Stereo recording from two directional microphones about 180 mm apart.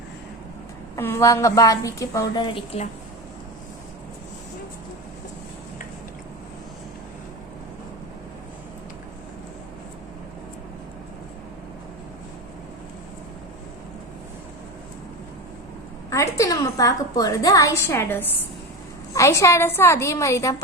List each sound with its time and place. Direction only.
0.9 s a woman's voice: 15° left (ahead or behind)
16.0 s a woman's voice: 15° left (ahead or behind)